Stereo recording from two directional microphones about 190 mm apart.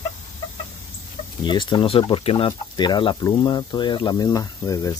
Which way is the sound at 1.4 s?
25° left (ahead or behind).